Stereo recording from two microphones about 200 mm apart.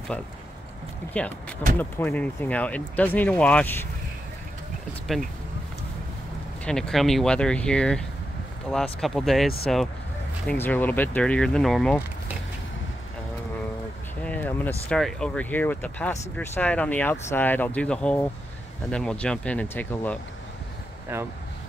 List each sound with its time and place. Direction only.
1.0 s speech: 10° left (ahead or behind)
6.6 s speech: 5° left (ahead or behind)
14.2 s speech: 10° left (ahead or behind)